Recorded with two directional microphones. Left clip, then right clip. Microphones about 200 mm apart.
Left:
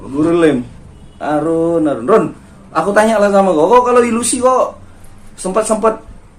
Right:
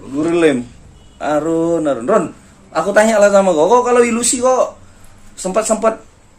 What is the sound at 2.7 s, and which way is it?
Speech, 25° right (ahead or behind).